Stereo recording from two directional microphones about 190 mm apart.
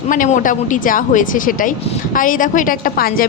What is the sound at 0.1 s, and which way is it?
A woman's voice, 45° left (ahead or behind).